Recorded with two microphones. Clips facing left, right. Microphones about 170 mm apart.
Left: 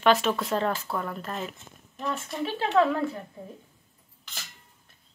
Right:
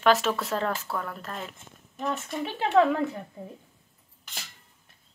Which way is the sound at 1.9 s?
15° right (ahead or behind).